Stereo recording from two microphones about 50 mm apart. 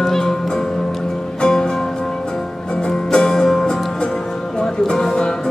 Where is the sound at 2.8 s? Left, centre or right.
Centre.